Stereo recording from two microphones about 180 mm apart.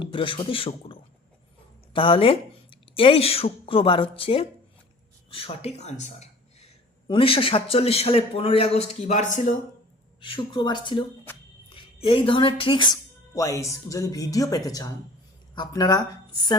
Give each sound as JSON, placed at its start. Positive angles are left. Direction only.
{"t": 0.0, "sound": "a man's voice", "side_deg": 30}
{"t": 10.2, "sound": "speech", "side_deg": 25}